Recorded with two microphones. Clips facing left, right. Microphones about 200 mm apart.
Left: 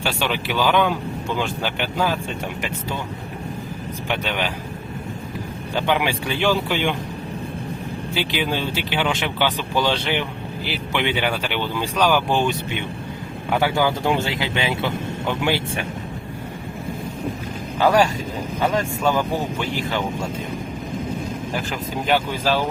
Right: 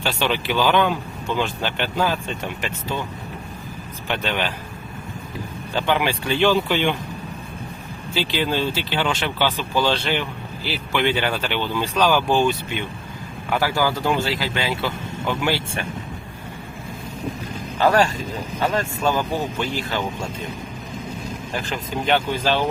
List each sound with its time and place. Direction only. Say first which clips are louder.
0.0 s speech: right 1 dB; 10° left (ahead or behind)
4.1 s speech: right 1 dB; 10° left (ahead or behind)
5.7 s speech: even; 15° left (ahead or behind)
8.1 s speech: right 2 dB; 15° left (ahead or behind)
17.8 s speech: left 1 dB; 10° left (ahead or behind)
22.0 s speech: even; 5° left (ahead or behind)